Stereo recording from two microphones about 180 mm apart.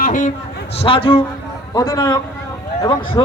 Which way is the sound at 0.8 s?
30° left (ahead or behind).